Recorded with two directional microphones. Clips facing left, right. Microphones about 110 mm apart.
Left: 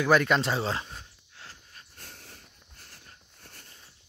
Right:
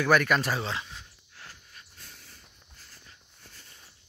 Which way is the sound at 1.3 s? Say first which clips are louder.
Even; 30° left (ahead or behind).